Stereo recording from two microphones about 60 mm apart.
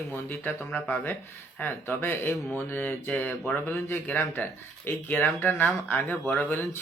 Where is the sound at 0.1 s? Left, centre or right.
Left.